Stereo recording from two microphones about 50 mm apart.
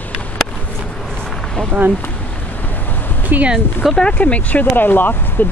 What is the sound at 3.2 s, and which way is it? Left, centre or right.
Speech, right.